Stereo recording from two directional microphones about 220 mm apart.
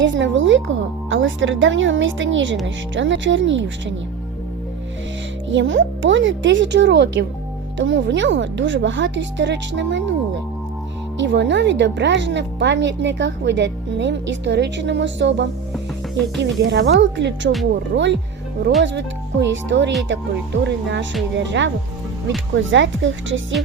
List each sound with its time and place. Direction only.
0.0 s speech: 55° right (ahead or behind)
5.5 s speech: 60° right (ahead or behind)
11.2 s speech: 55° right (ahead or behind)
15.7 s music: centre (ahead or behind)
16.4 s speech: 55° right (ahead or behind)